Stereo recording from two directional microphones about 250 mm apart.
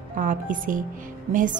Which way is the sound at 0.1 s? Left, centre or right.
Right.